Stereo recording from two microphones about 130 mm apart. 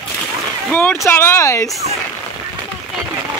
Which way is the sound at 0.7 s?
15° left (ahead or behind).